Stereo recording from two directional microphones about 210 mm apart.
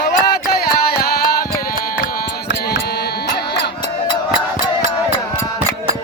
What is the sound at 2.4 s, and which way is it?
Music, 50° left (ahead or behind).